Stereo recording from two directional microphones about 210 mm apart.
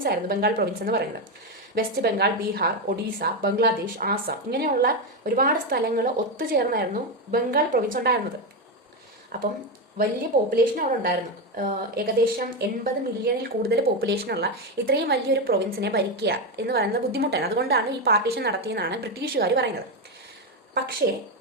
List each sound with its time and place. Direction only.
0.0 s a woman's voice: 45° right (ahead or behind)
9.3 s a woman's voice: 45° right (ahead or behind)
10.5 s a woman's voice: 40° right (ahead or behind)